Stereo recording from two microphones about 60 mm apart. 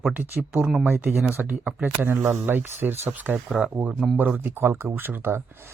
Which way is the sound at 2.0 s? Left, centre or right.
Right.